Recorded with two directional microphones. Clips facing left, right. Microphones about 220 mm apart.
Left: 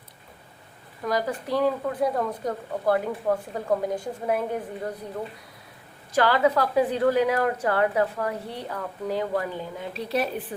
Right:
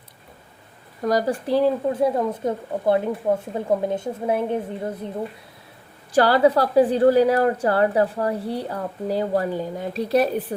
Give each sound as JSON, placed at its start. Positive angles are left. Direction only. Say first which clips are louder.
{"t": 1.0, "sound": "speech", "louder": "right 5 dB", "side_deg": -35}
{"t": 6.1, "sound": "a woman's voice", "louder": "right 5 dB", "side_deg": -35}